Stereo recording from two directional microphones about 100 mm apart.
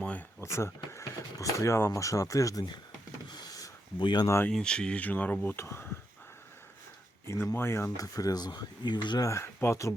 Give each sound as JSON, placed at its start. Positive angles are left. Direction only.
{"t": 0.0, "sound": "a sound", "side_deg": 15}
{"t": 0.4, "sound": "speech", "side_deg": 30}
{"t": 3.2, "sound": "a sound", "side_deg": 45}
{"t": 4.0, "sound": "speech", "side_deg": 45}
{"t": 4.4, "sound": "speech", "side_deg": 10}
{"t": 7.5, "sound": "speech", "side_deg": 25}
{"t": 7.9, "sound": "speech", "side_deg": 35}
{"t": 9.2, "sound": "speech", "side_deg": 25}